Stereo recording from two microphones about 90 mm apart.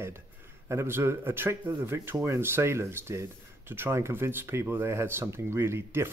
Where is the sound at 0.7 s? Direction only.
30° right (ahead or behind).